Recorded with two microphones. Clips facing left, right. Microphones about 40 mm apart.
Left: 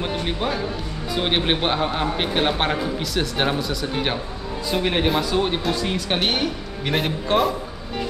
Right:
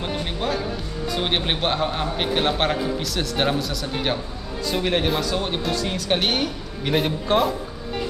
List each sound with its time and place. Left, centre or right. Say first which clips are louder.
0.0 s music: left 2 dB; centre
1.1 s a man's voice: left 3 dB; centre